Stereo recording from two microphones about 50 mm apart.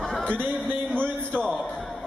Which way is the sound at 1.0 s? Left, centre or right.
Centre.